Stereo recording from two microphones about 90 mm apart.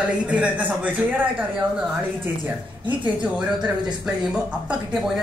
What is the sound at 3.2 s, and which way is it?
Speech, 15° right (ahead or behind).